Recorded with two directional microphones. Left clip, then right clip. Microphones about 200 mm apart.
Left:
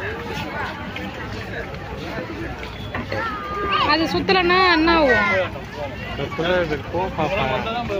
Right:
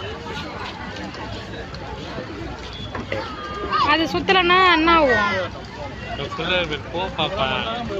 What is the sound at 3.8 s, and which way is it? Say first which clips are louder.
Speech: right 2 dB; 5° left (ahead or behind).